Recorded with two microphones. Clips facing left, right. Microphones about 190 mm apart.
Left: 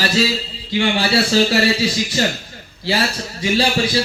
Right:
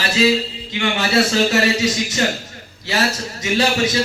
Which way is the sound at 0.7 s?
35° left (ahead or behind).